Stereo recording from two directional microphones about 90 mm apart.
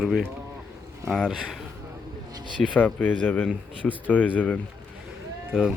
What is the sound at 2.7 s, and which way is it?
Speech, 20° left (ahead or behind).